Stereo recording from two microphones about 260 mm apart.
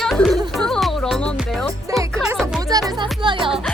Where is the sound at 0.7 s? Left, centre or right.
Centre.